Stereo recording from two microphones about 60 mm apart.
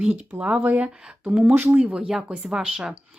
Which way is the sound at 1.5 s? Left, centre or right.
Right.